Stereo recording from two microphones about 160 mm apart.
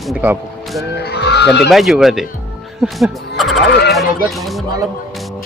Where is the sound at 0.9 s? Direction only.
90° left.